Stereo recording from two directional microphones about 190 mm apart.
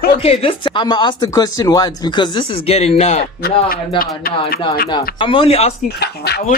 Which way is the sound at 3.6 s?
50° left (ahead or behind).